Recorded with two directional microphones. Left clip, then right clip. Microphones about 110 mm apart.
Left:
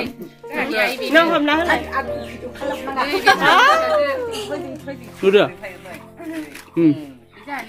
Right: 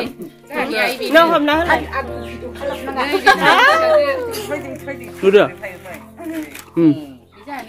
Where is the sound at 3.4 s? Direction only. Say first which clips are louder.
Even; 15° left (ahead or behind).